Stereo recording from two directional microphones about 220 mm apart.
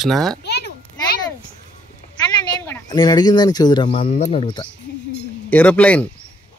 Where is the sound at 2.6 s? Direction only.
15° left (ahead or behind).